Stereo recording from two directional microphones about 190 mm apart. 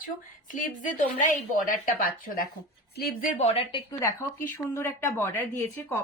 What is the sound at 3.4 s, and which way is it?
Speech, 30° left (ahead or behind).